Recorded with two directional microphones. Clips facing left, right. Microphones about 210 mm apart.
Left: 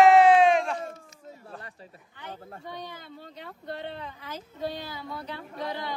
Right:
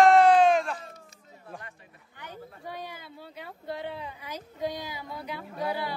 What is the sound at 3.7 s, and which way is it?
Speech, 10° right (ahead or behind).